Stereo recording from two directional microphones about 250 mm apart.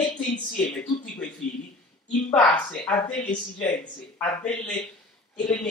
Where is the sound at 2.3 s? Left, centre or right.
Centre.